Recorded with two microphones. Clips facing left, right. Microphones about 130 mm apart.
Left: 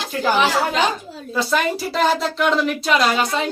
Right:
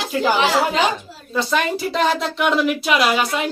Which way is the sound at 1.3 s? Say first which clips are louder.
Even; centre (ahead or behind).